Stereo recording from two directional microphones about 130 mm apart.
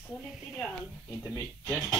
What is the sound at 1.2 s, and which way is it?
Speech, 20° left (ahead or behind).